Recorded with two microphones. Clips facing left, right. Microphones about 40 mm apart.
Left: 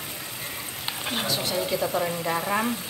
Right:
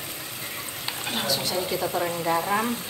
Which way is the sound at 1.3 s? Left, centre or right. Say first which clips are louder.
Right 2 dB; left.